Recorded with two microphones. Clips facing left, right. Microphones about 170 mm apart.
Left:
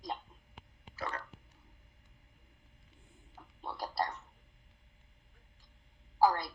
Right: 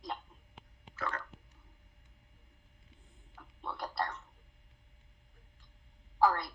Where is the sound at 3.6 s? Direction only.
30° left (ahead or behind).